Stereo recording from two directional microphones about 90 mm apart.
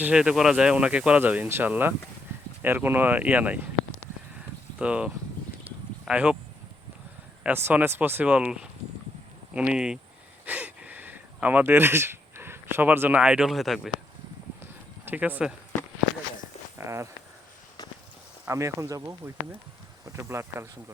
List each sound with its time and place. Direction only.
0.0 s speech: 10° right (ahead or behind)
4.8 s speech: 15° right (ahead or behind)
7.4 s speech: 20° right (ahead or behind)
10.4 s speech: 20° right (ahead or behind); by 13.9 s 5° right (ahead or behind)
14.6 s a sound: 20° right (ahead or behind)
16.7 s speech: 30° right (ahead or behind)
18.4 s speech: 35° right (ahead or behind)